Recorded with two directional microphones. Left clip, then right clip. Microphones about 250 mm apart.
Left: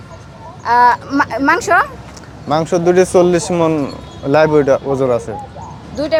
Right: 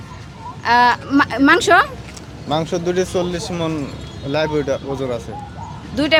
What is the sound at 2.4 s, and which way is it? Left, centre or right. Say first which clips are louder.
Speech: left 6 dB; centre.